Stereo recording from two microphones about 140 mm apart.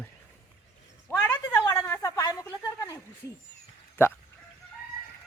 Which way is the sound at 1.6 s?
15° left (ahead or behind).